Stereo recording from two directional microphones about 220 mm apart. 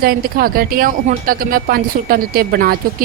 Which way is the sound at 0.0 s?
40° right (ahead or behind).